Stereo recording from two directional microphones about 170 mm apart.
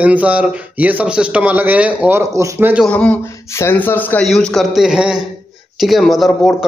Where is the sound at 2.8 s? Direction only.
5° left (ahead or behind).